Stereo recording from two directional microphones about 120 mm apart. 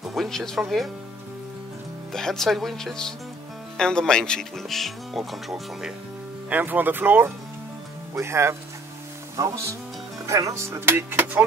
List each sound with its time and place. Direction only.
0.1 s speech: centre (ahead or behind)
2.1 s speech: 5° left (ahead or behind)
6.5 s speech: 15° right (ahead or behind)
10.2 s speech: 25° right (ahead or behind)